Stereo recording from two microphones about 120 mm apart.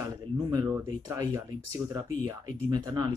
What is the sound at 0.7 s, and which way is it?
Speech, 20° right (ahead or behind).